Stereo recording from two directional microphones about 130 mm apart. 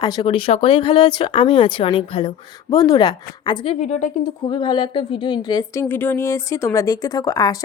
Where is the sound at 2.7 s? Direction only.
30° left (ahead or behind).